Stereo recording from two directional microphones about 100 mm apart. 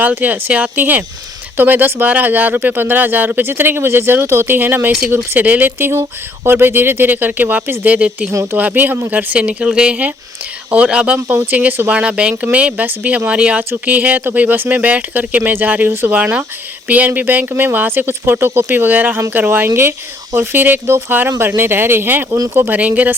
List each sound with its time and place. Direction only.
0.0 s speech: 15° right (ahead or behind)